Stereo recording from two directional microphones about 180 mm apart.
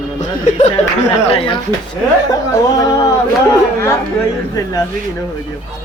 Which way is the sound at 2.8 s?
20° left (ahead or behind).